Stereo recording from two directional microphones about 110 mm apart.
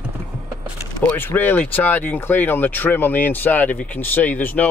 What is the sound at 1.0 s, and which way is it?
Speech, 20° left (ahead or behind).